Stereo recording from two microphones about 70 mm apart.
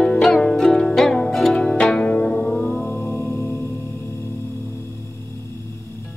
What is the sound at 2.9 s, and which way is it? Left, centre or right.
Music, left.